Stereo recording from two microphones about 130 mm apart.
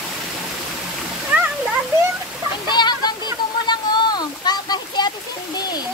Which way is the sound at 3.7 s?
35° left (ahead or behind).